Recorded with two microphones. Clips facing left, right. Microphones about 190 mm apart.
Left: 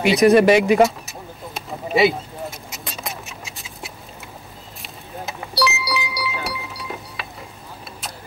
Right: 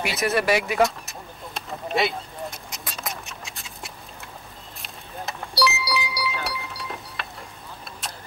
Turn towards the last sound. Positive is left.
turn(degrees=0)  # may be behind; listen again after turning